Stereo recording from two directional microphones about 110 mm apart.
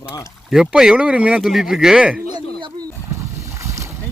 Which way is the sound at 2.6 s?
45° right (ahead or behind).